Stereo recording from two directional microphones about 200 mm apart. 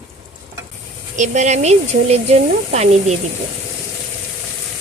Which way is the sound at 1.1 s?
35° right (ahead or behind).